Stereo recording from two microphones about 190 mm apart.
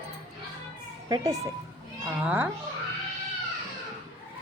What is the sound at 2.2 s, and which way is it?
Speech, 10° right (ahead or behind).